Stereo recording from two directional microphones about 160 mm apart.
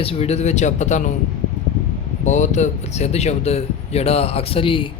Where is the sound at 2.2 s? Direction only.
50° left (ahead or behind).